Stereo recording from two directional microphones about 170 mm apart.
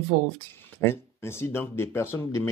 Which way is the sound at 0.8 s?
15° left (ahead or behind).